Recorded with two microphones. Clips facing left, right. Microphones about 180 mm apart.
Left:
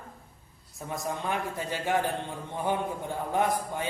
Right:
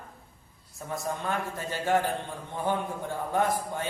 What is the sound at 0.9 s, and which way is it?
A man's voice, 15° left (ahead or behind).